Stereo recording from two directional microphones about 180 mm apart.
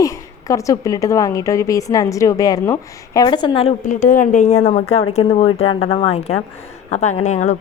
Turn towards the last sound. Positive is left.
turn(degrees=40)  # may be behind; listen again after turning